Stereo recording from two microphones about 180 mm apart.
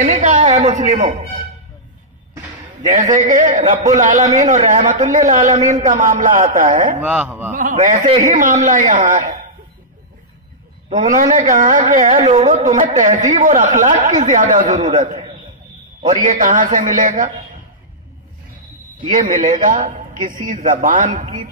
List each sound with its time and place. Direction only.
0.0 s a woman's voice: 45° right (ahead or behind)
2.8 s speech: 45° right (ahead or behind)
7.0 s a man's voice: 10° right (ahead or behind)
7.5 s speech: 45° right (ahead or behind)
10.9 s a man's voice: 40° right (ahead or behind)
19.1 s speech: 45° right (ahead or behind)